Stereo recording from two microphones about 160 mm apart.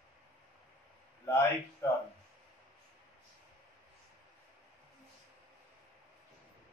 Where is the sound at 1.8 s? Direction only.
20° left (ahead or behind).